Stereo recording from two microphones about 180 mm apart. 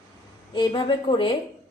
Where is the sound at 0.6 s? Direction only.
25° left (ahead or behind).